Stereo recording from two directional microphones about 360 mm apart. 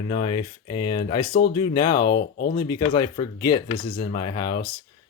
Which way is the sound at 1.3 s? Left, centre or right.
Left.